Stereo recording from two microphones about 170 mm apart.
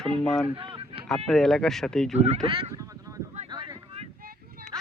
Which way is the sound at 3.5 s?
25° right (ahead or behind).